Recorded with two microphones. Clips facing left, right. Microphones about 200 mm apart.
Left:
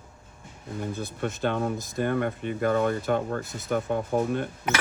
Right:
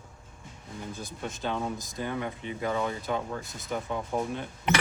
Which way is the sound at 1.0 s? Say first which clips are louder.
Left 7 dB; 60° left (ahead or behind).